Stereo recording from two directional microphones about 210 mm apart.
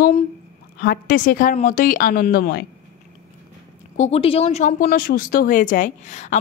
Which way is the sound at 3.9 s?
30° left (ahead or behind).